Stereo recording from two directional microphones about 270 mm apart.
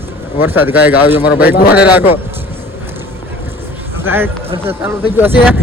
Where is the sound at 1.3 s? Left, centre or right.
Left.